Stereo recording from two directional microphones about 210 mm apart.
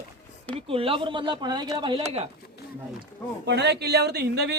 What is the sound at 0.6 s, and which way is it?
A man's voice, 25° right (ahead or behind).